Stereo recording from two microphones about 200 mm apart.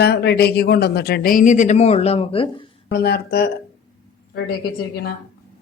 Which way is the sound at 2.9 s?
50° left (ahead or behind).